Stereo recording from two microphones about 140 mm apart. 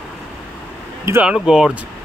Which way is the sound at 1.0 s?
20° right (ahead or behind).